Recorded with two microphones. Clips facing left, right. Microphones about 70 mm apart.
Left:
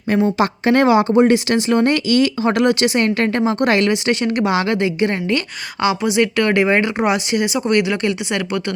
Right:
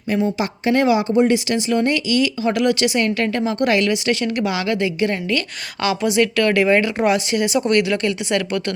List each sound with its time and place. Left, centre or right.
0.1 s speech: left
5.8 s speech: centre